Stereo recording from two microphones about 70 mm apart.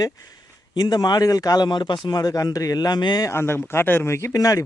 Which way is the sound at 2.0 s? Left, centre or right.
Left.